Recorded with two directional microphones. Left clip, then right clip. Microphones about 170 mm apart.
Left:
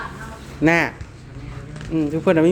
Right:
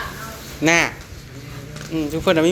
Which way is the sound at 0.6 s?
35° left (ahead or behind).